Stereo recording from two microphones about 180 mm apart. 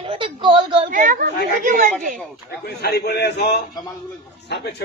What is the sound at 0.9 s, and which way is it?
Speech, 50° right (ahead or behind).